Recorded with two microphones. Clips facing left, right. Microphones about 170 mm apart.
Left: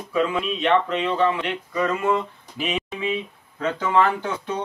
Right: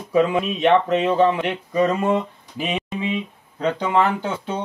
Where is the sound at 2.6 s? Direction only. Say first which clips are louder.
Right 1 dB; 35° right (ahead or behind).